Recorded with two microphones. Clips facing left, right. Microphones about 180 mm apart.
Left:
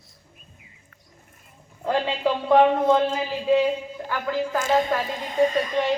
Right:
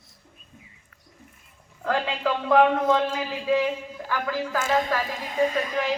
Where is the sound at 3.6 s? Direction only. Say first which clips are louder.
Left 3 dB; 15° left (ahead or behind).